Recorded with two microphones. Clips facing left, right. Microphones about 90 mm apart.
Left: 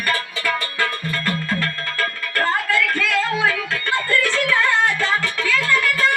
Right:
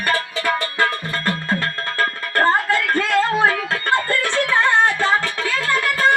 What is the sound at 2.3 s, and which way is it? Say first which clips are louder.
Music: right 3 dB; 35° right (ahead or behind).